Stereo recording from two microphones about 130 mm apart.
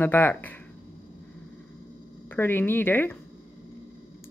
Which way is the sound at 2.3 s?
15° left (ahead or behind).